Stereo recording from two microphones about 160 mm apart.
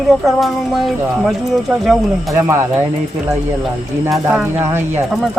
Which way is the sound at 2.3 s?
15° right (ahead or behind).